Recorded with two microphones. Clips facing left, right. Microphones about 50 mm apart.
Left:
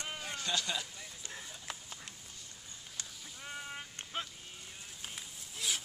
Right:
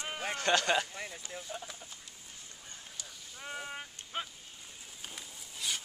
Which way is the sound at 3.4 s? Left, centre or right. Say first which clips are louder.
Right 3 dB; centre.